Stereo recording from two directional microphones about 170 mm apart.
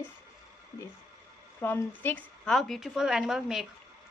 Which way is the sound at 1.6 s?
10° left (ahead or behind).